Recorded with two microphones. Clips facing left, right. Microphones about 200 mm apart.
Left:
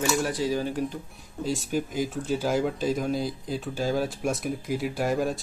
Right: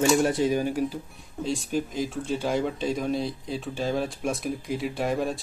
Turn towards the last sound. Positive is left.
turn(degrees=0)  # may be behind; listen again after turning